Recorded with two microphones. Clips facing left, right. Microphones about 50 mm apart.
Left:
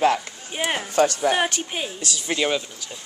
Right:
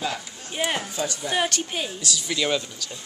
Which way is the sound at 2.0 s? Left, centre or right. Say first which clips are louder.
Left 3 dB; left.